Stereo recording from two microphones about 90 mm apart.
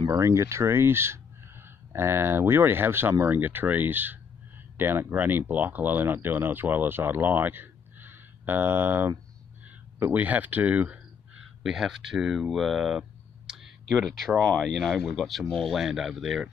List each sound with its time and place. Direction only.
0.1 s speech: 35° right (ahead or behind); by 11.0 s 20° right (ahead or behind)
11.6 s speech: 5° right (ahead or behind)
13.5 s a sound: 10° right (ahead or behind)
13.8 s speech: 5° left (ahead or behind)